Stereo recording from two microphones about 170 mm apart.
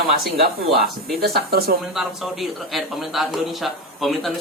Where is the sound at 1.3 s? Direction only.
65° right (ahead or behind).